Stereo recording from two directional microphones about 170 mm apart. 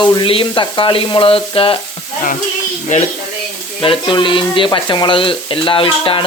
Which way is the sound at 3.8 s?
30° left (ahead or behind).